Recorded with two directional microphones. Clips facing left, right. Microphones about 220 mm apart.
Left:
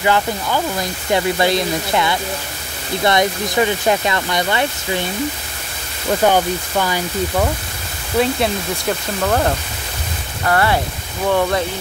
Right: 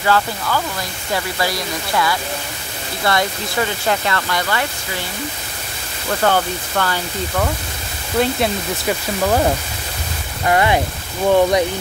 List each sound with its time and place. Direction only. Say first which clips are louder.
0.0 s speech: left 1 dB; 20° left (ahead or behind)
6.2 s speech: left 2 dB; 15° left (ahead or behind)
8.2 s speech: left 1 dB; centre (ahead or behind)